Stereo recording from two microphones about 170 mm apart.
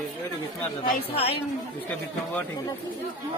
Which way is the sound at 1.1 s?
35° left (ahead or behind).